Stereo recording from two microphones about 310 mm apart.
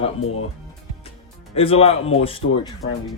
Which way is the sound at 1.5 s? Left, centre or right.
Centre.